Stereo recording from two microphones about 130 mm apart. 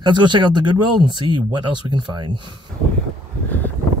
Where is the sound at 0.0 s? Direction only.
35° right (ahead or behind).